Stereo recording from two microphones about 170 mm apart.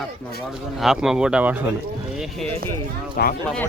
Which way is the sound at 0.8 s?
Centre (ahead or behind).